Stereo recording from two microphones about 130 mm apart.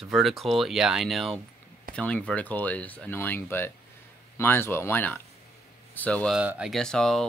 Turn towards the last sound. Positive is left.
turn(degrees=5)  # may be behind; listen again after turning